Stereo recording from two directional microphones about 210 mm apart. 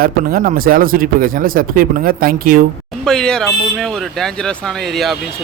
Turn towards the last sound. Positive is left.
turn(degrees=0)  # may be behind; listen again after turning